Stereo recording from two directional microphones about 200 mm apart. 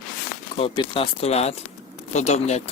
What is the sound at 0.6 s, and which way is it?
Speech, 25° left (ahead or behind).